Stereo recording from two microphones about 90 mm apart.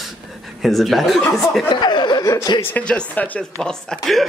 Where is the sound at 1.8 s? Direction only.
60° left (ahead or behind).